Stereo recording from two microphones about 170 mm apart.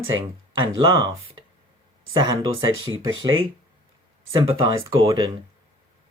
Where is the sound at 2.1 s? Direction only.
20° right (ahead or behind).